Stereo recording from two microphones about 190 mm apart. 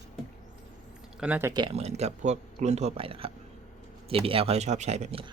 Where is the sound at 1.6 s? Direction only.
35° right (ahead or behind).